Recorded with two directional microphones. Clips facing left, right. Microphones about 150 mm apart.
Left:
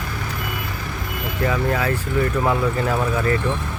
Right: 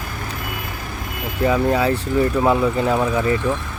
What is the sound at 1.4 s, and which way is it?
Speech, 20° right (ahead or behind).